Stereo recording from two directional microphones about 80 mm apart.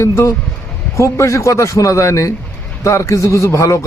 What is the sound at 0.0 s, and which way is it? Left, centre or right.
A man's voice, left.